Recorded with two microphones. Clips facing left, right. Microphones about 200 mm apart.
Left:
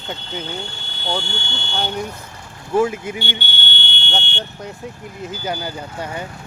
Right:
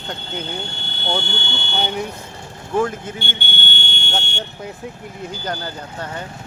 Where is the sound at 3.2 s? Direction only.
50° right (ahead or behind).